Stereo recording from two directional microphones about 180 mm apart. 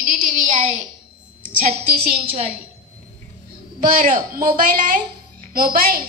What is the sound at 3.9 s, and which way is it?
A woman's voice, 50° right (ahead or behind).